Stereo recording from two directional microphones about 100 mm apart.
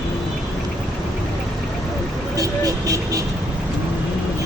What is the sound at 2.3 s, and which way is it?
Vehicle, 35° right (ahead or behind).